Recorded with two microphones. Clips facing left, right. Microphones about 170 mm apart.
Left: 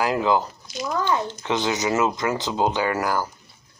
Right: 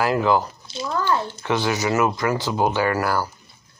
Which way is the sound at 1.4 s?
20° left (ahead or behind).